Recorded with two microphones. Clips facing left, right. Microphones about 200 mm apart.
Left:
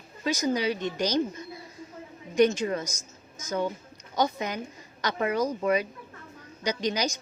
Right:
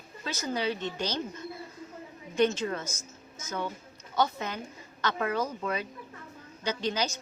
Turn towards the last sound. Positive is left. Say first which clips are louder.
# left 2 dB
turn(degrees=15)  # may be behind; listen again after turning